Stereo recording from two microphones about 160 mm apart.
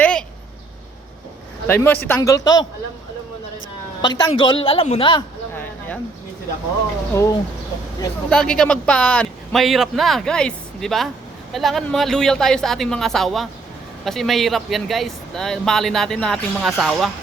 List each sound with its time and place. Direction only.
0.0 s a sound: 5° left (ahead or behind)
1.6 s speech: 15° left (ahead or behind)
4.0 s a woman's voice: 25° left (ahead or behind)
7.1 s speech: 20° left (ahead or behind)
8.3 s a man's voice: 5° left (ahead or behind)